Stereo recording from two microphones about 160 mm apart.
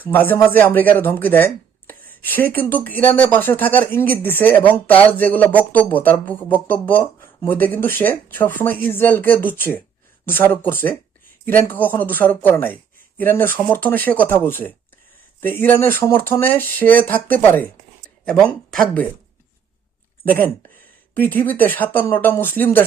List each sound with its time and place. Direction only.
0.1 s speech: 10° left (ahead or behind)
20.2 s speech: 10° left (ahead or behind)